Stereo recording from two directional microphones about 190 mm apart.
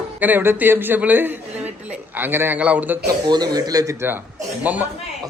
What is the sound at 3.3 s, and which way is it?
A man's voice, 20° right (ahead or behind).